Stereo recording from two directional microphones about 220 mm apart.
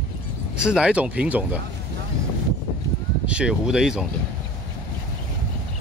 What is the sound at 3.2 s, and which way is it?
Speech, 5° right (ahead or behind).